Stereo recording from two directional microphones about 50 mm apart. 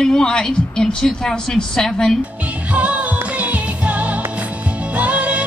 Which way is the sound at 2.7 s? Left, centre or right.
Right.